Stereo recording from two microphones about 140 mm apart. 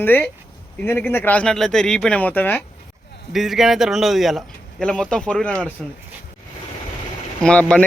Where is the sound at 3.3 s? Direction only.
5° right (ahead or behind).